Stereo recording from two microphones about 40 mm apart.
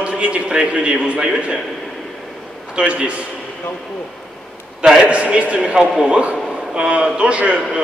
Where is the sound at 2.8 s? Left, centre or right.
Right.